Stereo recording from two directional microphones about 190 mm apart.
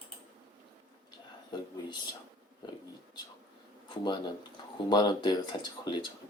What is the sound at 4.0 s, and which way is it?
Speech, 25° left (ahead or behind).